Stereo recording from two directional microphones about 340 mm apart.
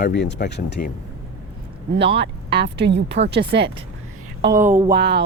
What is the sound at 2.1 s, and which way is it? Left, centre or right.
Speech, right.